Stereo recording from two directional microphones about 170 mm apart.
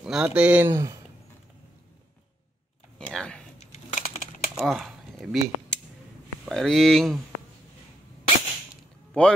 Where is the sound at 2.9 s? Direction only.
5° left (ahead or behind).